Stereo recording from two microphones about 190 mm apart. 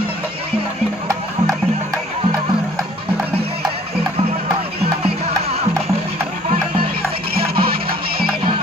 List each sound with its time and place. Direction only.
5.0 s music: 30° right (ahead or behind)
7.4 s music: 55° right (ahead or behind)